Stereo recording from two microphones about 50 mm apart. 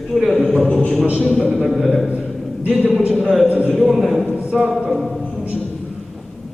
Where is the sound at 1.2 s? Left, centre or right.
Centre.